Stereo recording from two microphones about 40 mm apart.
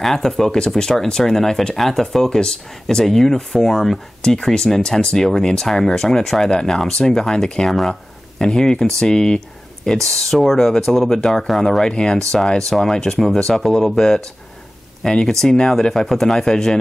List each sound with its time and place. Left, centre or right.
0.0 s speech: centre
11.9 s speech: left
12.3 s speech: centre